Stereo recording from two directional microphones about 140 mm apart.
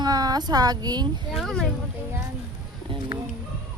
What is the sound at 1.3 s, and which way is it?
Speech, centre (ahead or behind).